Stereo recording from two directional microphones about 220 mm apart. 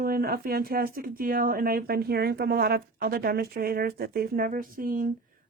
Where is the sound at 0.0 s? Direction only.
40° right (ahead or behind).